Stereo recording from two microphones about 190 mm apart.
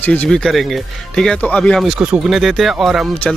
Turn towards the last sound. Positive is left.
turn(degrees=0)  # may be behind; listen again after turning